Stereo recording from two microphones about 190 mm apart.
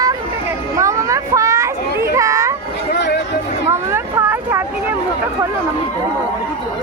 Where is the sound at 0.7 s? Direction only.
15° right (ahead or behind).